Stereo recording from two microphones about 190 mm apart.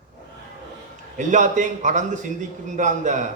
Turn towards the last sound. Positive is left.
turn(degrees=-40)  # may be behind; listen again after turning